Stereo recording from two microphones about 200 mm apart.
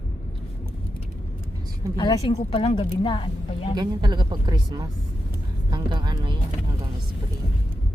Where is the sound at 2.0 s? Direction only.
20° left (ahead or behind).